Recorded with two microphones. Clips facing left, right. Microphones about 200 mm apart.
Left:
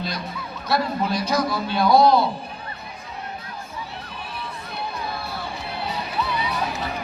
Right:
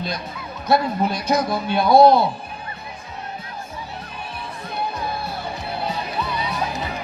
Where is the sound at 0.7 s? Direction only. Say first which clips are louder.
Right 3 dB; 50° right (ahead or behind).